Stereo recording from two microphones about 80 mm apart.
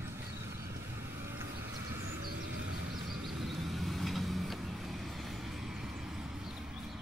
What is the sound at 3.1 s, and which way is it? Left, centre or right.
Vehicle, centre.